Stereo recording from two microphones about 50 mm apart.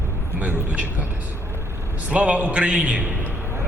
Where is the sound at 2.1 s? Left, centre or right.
Right.